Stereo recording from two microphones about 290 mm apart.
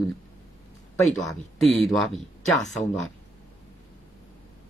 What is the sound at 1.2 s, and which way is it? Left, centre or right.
Speech, centre.